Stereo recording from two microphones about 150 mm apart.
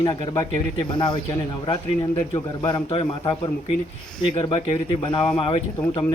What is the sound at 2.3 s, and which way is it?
Speech, 25° left (ahead or behind).